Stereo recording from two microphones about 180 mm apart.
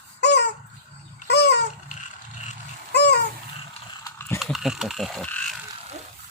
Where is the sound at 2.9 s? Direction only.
70° left (ahead or behind).